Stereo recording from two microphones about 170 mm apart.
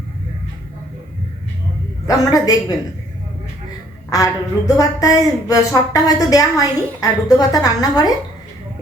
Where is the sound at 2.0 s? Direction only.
20° left (ahead or behind).